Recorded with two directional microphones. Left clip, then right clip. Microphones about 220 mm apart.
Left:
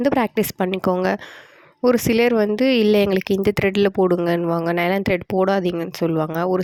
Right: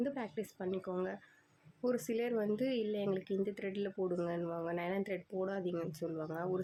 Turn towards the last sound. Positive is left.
turn(degrees=45)  # may be behind; listen again after turning